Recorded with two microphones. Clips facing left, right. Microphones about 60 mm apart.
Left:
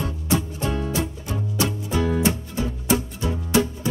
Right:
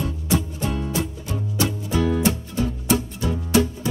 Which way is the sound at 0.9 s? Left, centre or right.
Left.